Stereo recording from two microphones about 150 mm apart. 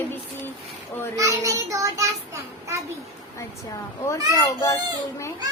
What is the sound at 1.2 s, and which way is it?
Child singing, 20° right (ahead or behind).